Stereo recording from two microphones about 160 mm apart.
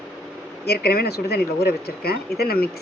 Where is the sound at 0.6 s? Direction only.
85° left.